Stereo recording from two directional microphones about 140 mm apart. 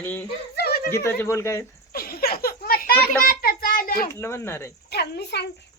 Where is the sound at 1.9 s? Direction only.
90° left.